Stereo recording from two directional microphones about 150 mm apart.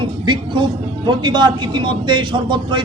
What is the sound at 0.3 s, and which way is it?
A man's voice, 30° right (ahead or behind).